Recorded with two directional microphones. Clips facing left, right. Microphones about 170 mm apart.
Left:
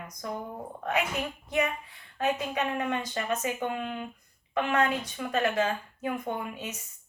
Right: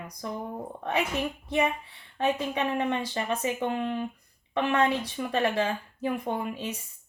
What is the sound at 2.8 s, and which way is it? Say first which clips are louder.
A woman's voice: right 2 dB; 30° right (ahead or behind).